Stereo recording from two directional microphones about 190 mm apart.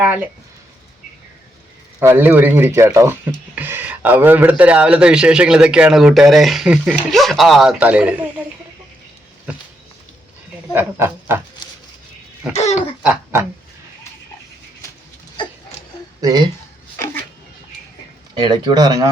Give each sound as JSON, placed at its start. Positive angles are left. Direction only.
{"t": 2.0, "sound": "speech", "side_deg": -10}
{"t": 10.7, "sound": "speech", "side_deg": -10}
{"t": 12.5, "sound": "speech", "side_deg": 35}
{"t": 13.0, "sound": "quack", "side_deg": -5}
{"t": 16.2, "sound": "speech", "side_deg": -20}
{"t": 18.3, "sound": "speech", "side_deg": -25}